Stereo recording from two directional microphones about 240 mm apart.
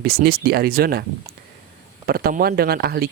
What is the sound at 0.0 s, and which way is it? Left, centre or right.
Speech, right.